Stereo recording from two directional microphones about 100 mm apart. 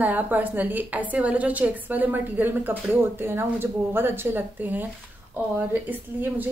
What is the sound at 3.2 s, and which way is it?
A woman's voice, 25° right (ahead or behind).